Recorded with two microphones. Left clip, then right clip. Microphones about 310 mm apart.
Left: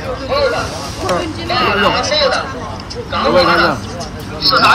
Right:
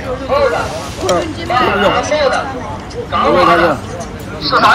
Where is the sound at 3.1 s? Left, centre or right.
Centre.